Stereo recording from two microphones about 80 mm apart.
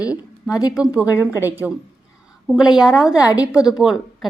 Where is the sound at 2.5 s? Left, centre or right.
Centre.